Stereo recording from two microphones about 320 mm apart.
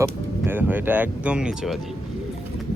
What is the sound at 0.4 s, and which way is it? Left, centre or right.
Speech, centre.